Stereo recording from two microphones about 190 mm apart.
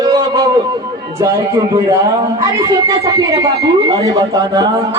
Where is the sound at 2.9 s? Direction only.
20° right (ahead or behind).